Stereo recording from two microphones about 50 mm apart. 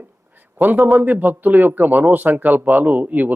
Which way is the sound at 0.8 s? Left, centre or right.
Right.